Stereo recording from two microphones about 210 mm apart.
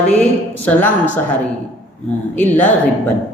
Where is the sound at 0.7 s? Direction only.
10° left (ahead or behind).